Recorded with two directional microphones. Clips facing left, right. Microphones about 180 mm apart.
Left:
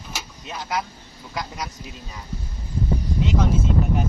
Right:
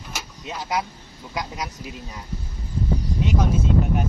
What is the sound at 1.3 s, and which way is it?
Speech, 15° right (ahead or behind).